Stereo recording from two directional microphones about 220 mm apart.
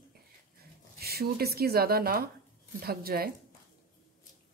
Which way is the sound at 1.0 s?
45° right (ahead or behind).